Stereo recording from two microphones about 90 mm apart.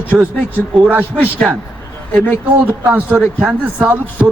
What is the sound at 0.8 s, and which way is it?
Speech, 20° right (ahead or behind).